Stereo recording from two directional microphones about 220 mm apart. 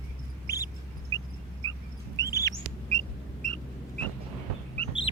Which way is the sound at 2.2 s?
15° left (ahead or behind).